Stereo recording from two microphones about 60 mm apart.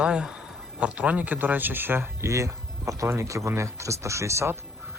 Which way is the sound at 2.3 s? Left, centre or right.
Right.